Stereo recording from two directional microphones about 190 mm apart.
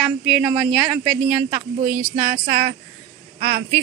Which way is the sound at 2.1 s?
40° right (ahead or behind).